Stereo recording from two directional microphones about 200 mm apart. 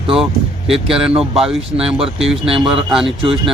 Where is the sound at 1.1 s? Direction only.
30° right (ahead or behind).